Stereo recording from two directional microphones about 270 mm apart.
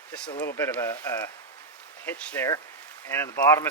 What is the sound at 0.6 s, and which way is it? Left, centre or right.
Speech, centre.